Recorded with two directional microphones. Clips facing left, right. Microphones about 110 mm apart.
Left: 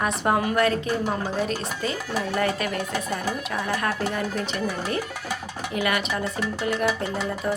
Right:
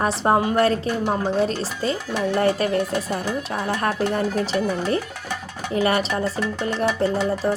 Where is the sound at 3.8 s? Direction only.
35° right (ahead or behind).